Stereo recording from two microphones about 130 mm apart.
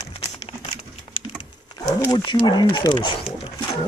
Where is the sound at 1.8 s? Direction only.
30° left (ahead or behind).